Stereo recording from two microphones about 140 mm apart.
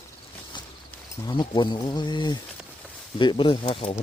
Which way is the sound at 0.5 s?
35° left (ahead or behind).